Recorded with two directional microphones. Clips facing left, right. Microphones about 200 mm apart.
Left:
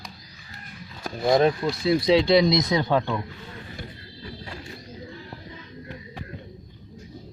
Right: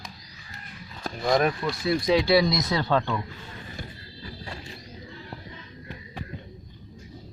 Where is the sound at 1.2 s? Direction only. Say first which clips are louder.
Left 4 dB; 25° left (ahead or behind).